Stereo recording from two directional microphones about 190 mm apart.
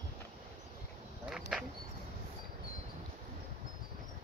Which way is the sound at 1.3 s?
5° right (ahead or behind).